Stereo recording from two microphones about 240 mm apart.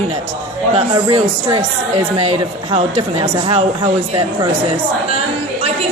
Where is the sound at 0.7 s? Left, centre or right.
Right.